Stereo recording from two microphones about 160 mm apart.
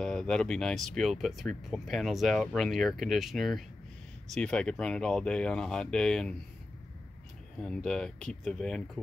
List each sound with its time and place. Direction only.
0.0 s speech: 5° left (ahead or behind)
7.6 s speech: 5° left (ahead or behind)